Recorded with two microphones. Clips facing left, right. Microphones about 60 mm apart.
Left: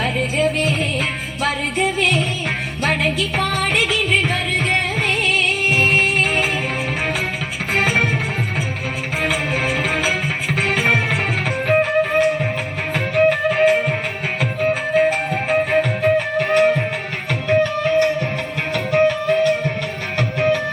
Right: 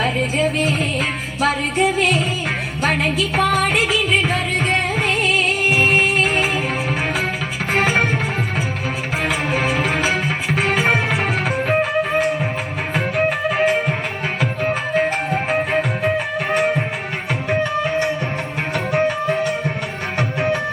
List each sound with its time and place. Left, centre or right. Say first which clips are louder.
2.8 s music: even; centre
7.8 s music: right 1 dB; right
9.2 s music: even; centre
16.1 s music: left 3 dB; centre